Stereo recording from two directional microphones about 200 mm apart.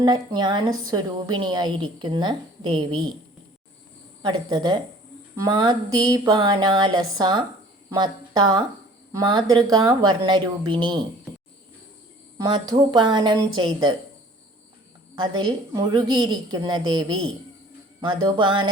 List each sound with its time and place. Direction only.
0.0 s a woman's voice: 20° right (ahead or behind)
4.2 s a woman's voice: 20° right (ahead or behind)
12.4 s a woman's voice: 20° right (ahead or behind)
15.4 s a woman's voice: 20° right (ahead or behind)